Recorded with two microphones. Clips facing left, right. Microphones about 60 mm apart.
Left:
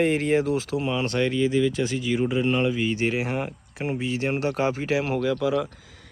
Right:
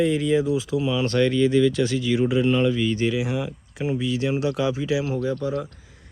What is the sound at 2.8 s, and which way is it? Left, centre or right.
Speech, left.